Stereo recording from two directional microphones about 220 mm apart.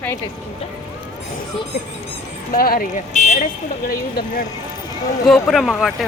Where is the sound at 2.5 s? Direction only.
40° left (ahead or behind).